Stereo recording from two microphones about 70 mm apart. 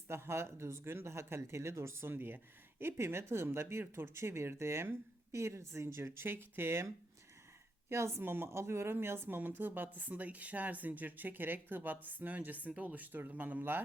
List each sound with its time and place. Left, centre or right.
0.1 s speech: right
7.9 s speech: right